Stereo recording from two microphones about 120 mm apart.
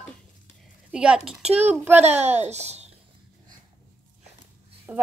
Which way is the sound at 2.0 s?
65° right (ahead or behind).